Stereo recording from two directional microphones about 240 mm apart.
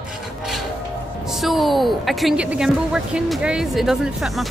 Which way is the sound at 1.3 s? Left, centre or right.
Centre.